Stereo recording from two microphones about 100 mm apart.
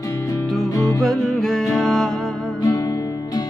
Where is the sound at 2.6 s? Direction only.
40° left (ahead or behind).